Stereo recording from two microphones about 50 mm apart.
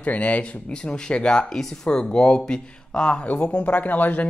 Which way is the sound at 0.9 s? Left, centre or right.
Centre.